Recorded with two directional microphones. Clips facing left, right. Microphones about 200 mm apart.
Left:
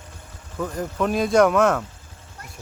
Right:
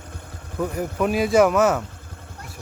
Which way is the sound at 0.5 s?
10° right (ahead or behind).